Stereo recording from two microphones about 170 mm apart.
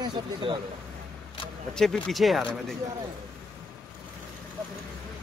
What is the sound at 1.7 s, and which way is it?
Speech, 5° left (ahead or behind).